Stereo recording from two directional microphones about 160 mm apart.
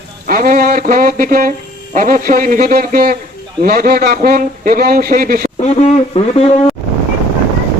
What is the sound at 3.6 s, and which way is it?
A man's voice, 70° right (ahead or behind).